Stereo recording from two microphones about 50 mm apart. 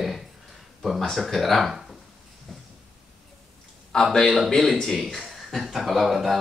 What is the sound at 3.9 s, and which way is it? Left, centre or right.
A man's voice, centre.